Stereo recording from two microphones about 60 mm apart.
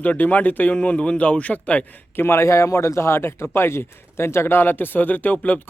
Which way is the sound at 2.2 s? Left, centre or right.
Left.